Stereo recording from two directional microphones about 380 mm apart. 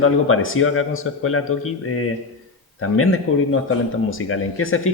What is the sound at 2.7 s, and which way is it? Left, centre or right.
A man's voice, left.